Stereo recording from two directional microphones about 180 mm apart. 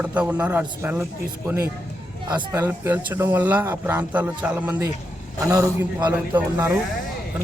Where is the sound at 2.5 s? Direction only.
10° right (ahead or behind).